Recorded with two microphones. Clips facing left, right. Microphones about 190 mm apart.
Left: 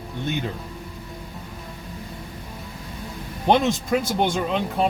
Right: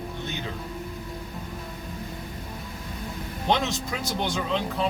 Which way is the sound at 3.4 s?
55° left (ahead or behind).